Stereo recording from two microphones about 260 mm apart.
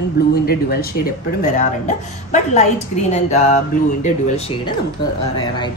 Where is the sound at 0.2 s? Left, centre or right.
Left; by 5.7 s centre.